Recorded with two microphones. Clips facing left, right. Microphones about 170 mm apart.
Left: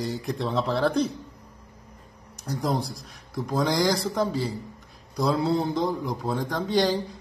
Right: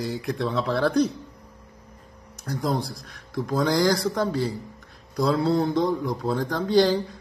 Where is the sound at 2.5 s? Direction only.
10° left (ahead or behind).